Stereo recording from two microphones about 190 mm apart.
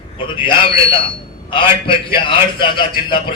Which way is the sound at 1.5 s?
25° left (ahead or behind).